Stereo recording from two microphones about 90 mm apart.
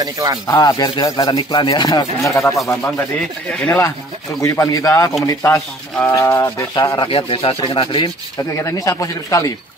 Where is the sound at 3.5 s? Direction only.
15° left (ahead or behind).